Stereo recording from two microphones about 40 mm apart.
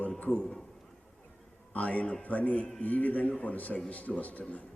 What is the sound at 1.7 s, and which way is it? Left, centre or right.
A man's voice, left.